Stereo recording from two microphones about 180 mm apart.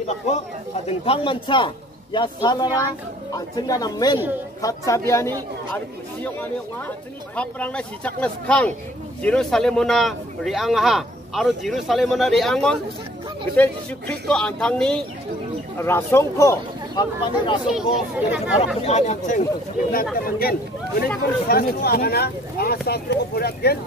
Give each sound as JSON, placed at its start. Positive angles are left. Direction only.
{"t": 0.8, "sound": "speech", "side_deg": 35}
{"t": 7.3, "sound": "speech", "side_deg": 5}
{"t": 17.6, "sound": "speech", "side_deg": -5}
{"t": 18.9, "sound": "speech", "side_deg": 40}
{"t": 20.2, "sound": "speech", "side_deg": 55}